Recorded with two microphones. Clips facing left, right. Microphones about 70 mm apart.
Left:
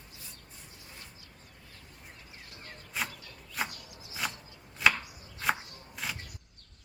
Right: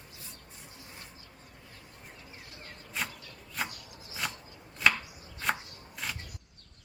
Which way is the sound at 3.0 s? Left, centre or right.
Centre.